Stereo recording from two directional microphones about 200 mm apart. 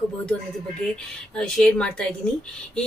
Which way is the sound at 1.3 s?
5° left (ahead or behind).